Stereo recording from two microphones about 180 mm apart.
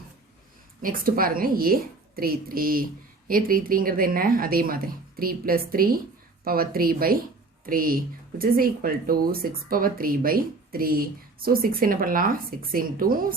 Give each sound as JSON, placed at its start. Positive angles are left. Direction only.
{"t": 0.8, "sound": "speech", "side_deg": -50}